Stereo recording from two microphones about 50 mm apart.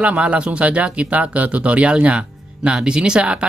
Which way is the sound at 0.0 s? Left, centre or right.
Right.